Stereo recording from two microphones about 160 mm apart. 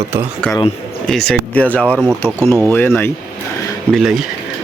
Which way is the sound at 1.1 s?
Centre (ahead or behind).